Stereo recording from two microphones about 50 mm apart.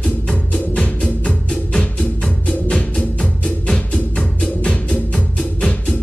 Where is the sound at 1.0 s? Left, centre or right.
Centre.